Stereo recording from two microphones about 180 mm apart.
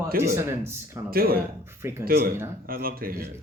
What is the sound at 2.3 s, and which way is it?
Speech, 15° right (ahead or behind).